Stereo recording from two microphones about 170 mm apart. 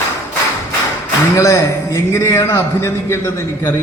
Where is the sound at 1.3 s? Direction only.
15° left (ahead or behind).